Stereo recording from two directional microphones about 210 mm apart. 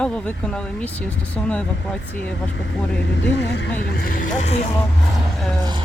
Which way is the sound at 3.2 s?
55° left (ahead or behind).